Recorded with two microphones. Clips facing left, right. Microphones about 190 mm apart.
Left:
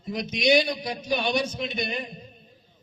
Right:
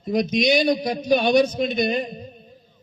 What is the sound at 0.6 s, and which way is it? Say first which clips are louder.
A man's voice: right 8 dB; 45° right (ahead or behind).